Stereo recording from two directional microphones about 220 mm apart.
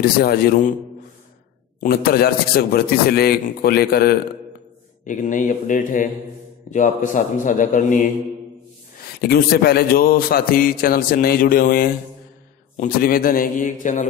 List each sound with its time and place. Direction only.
0.0 s a man's voice: 45° left (ahead or behind)
1.8 s a man's voice: 45° left (ahead or behind)
9.2 s a man's voice: 45° left (ahead or behind)